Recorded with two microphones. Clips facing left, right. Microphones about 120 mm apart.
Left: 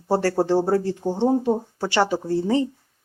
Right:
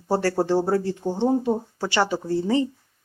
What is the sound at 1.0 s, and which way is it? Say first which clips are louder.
Speech: left 1 dB; 20° left (ahead or behind).